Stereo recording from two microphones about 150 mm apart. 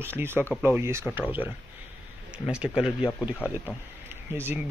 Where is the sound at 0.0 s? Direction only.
15° right (ahead or behind).